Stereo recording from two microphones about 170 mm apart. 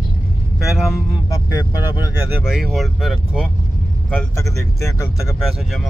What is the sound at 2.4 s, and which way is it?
Speech, centre (ahead or behind).